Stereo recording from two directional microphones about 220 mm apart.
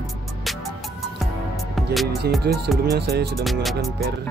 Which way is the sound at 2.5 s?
45° right (ahead or behind).